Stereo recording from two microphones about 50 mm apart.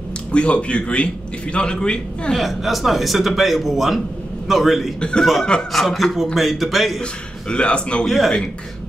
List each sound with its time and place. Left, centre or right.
0.3 s a man's voice: left
2.3 s a man's voice: centre
5.4 s speech: centre
5.7 s a man's voice: centre
7.0 s a man's voice: left
8.0 s speech: centre